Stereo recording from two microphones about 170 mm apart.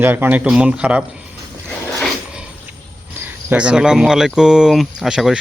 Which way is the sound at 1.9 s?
5° left (ahead or behind).